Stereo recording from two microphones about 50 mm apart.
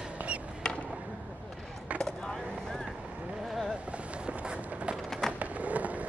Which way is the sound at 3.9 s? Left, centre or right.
Right.